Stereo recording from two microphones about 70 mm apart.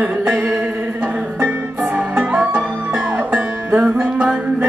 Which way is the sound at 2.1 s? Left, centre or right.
Right.